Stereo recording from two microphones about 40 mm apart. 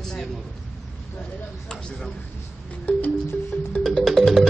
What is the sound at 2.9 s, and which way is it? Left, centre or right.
Music, left.